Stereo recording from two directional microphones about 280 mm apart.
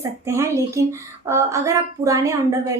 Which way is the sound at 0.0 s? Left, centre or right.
Centre.